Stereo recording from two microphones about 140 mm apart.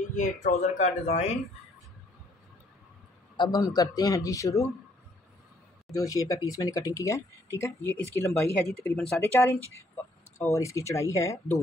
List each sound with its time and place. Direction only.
0.1 s speech: 60° left (ahead or behind)
3.3 s speech: 30° left (ahead or behind)
5.9 s speech: 25° left (ahead or behind)
8.6 s speech: 5° left (ahead or behind)
9.2 s speech: 20° left (ahead or behind)